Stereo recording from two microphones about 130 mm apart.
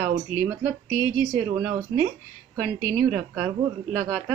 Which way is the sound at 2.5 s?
90° right.